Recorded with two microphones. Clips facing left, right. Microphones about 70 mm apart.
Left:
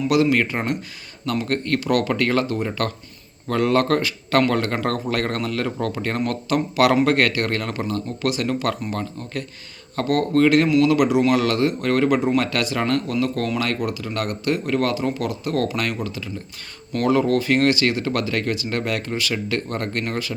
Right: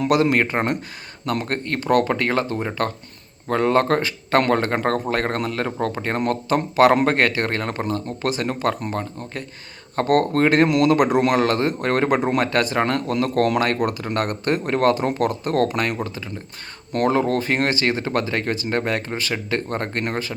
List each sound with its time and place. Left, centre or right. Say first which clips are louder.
0.1 s speech: even; right
9.9 s speech: right 1 dB; right
10.7 s speech: even; right
13.1 s speech: right 3 dB; right